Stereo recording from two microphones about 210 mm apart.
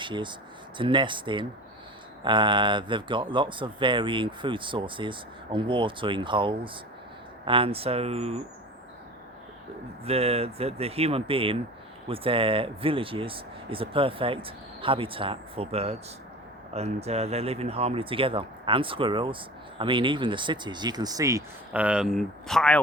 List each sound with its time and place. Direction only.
0.0 s speech: 20° right (ahead or behind)
10.0 s speech: 30° right (ahead or behind); by 22.8 s 5° left (ahead or behind)